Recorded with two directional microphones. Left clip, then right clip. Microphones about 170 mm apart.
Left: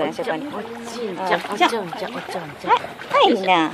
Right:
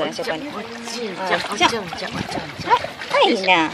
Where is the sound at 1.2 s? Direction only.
30° left (ahead or behind).